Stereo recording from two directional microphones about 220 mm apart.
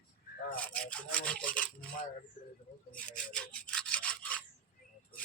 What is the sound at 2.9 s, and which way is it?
Rub, 5° left (ahead or behind).